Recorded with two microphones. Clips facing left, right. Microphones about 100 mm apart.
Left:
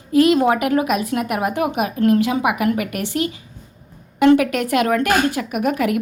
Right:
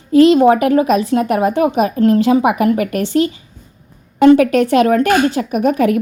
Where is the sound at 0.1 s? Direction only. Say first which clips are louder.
Right 6 dB; 30° right (ahead or behind).